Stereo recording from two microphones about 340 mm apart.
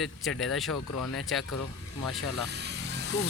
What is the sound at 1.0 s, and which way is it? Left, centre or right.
Speech, left.